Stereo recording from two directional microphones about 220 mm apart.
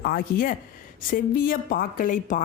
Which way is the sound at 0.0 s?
40° left (ahead or behind).